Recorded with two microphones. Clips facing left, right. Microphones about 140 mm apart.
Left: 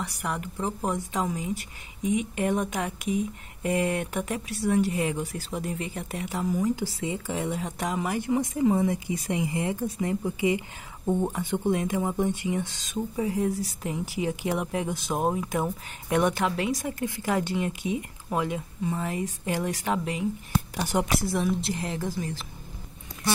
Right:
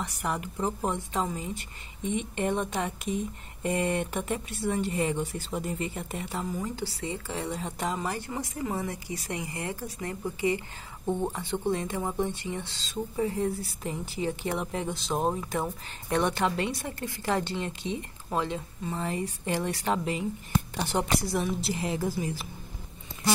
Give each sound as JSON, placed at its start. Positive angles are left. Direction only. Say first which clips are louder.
{"t": 0.0, "sound": "speech", "louder": "even", "side_deg": 0}
{"t": 0.8, "sound": "speech", "louder": "left 1 dB", "side_deg": 10}
{"t": 6.7, "sound": "speech", "louder": "left 5 dB", "side_deg": 15}
{"t": 21.2, "sound": "a woman's voice", "louder": "left 3 dB", "side_deg": 0}